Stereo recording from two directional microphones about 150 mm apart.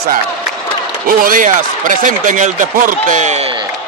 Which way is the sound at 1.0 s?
65° right (ahead or behind).